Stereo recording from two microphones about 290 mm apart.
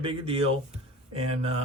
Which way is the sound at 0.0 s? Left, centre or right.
Centre.